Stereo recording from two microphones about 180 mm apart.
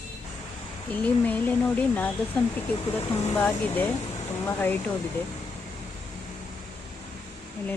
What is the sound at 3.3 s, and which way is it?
Speech, 10° left (ahead or behind).